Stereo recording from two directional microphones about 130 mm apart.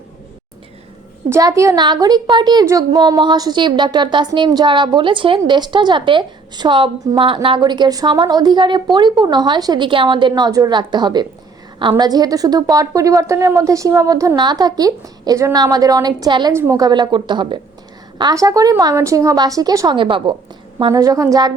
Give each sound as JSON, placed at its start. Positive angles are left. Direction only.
{"t": 1.3, "sound": "a woman's voice", "side_deg": -25}
{"t": 16.5, "sound": "a woman's voice", "side_deg": -20}
{"t": 20.0, "sound": "a woman's voice", "side_deg": -40}
{"t": 20.9, "sound": "a woman's voice", "side_deg": -25}